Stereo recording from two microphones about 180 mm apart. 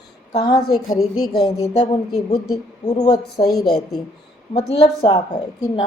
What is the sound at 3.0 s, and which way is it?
Speech, 20° left (ahead or behind).